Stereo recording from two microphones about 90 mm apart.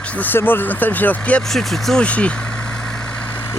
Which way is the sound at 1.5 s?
5° left (ahead or behind).